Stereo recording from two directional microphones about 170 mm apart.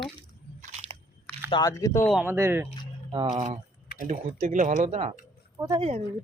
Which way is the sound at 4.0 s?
45° right (ahead or behind).